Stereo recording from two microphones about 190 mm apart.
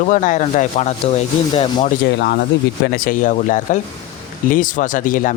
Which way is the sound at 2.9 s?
45° left (ahead or behind).